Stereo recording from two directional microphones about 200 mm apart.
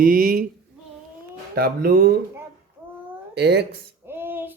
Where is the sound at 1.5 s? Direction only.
50° right (ahead or behind).